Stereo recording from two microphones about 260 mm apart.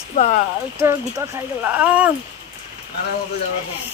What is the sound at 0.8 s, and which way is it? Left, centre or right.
Speech, centre.